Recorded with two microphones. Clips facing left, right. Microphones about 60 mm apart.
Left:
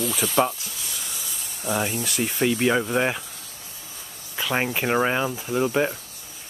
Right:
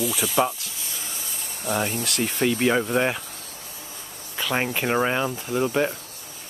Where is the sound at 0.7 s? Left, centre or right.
Right.